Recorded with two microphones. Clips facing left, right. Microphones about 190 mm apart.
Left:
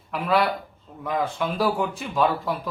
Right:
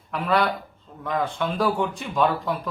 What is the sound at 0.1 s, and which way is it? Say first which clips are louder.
A man's voice: even; centre (ahead or behind).